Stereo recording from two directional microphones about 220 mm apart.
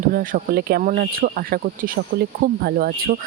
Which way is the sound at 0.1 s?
40° right (ahead or behind).